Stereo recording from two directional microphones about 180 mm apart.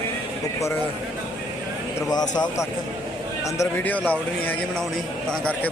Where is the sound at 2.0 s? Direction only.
20° left (ahead or behind).